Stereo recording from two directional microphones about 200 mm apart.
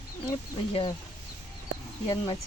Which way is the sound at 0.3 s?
25° left (ahead or behind).